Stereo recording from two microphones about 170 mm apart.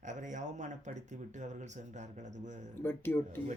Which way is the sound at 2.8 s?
10° left (ahead or behind).